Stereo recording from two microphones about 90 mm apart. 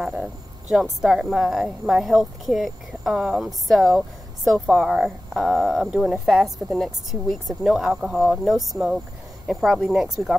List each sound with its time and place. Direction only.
0.1 s speech: 10° right (ahead or behind)